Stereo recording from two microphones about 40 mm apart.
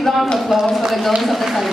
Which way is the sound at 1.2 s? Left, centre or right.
Centre.